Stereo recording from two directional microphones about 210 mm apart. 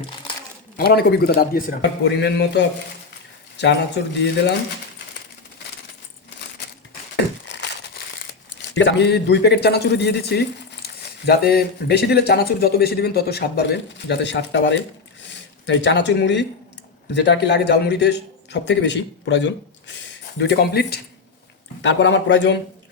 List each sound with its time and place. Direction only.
0.8 s a man's voice: 50° left (ahead or behind)
7.4 s a sound: 55° left (ahead or behind)
8.7 s speech: 55° left (ahead or behind)
15.2 s a sound: 60° left (ahead or behind)
17.1 s a man's voice: 55° left (ahead or behind)
20.4 s speech: 50° left (ahead or behind)
21.8 s a man's voice: 60° left (ahead or behind)